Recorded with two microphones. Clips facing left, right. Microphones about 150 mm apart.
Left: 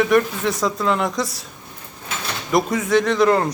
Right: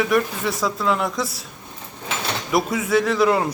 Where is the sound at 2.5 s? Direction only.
5° right (ahead or behind).